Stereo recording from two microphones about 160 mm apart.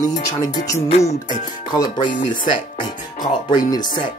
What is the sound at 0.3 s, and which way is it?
Speech, 20° left (ahead or behind).